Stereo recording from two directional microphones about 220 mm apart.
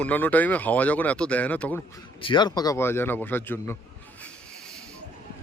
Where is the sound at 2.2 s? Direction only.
20° left (ahead or behind).